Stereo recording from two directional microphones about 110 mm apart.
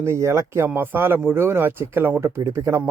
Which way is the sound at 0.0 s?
25° right (ahead or behind).